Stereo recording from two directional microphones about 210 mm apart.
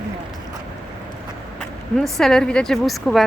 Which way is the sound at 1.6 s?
Centre (ahead or behind).